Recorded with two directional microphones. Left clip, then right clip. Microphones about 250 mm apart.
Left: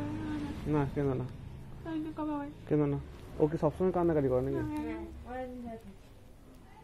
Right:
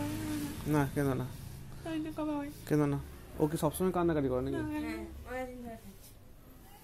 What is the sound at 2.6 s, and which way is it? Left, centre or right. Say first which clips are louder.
Speech: left 1 dB; right.